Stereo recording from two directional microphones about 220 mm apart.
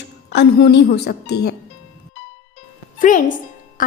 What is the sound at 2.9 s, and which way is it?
Speech, 35° left (ahead or behind).